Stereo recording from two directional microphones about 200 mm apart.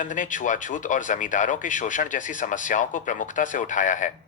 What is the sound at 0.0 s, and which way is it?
A man's voice, 40° left (ahead or behind).